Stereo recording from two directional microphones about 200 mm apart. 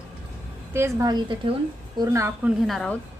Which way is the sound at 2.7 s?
Centre (ahead or behind).